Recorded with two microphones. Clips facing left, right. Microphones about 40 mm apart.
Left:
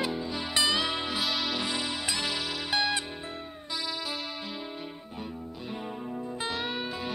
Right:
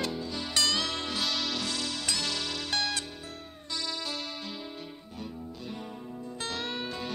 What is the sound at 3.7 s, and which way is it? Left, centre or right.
Music, centre.